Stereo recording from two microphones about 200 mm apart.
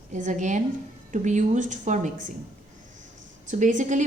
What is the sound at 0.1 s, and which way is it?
A woman's voice, 40° right (ahead or behind).